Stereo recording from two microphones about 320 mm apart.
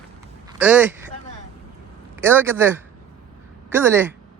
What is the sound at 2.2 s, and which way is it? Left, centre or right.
Speech, centre.